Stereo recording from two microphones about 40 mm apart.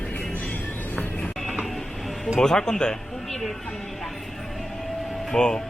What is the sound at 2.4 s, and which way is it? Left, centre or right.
Speech, centre.